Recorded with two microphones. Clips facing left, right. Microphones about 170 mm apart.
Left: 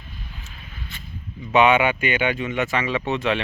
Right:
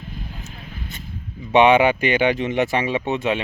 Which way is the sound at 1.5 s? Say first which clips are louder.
Right 3 dB; 35° right (ahead or behind).